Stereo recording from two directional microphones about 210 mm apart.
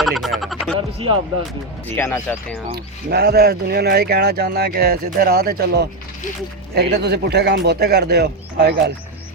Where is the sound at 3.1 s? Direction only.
50° right (ahead or behind).